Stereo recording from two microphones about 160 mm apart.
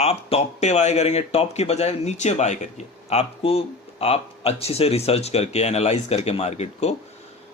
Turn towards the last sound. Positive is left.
turn(degrees=40)  # may be behind; listen again after turning